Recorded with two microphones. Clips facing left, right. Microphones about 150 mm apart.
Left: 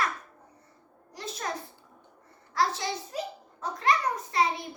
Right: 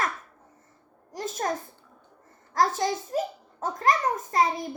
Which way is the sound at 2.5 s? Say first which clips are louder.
Right 4 dB; 45° right (ahead or behind).